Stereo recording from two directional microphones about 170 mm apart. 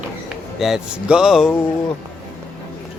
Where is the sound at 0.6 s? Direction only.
5° right (ahead or behind).